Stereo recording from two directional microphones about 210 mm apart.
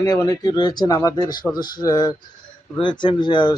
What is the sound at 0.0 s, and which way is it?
Speech, 15° left (ahead or behind).